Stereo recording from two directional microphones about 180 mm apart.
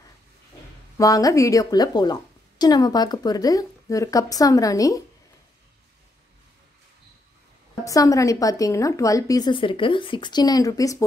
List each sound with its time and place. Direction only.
0.9 s a woman's voice: 20° left (ahead or behind)
7.8 s a woman's voice: 20° left (ahead or behind)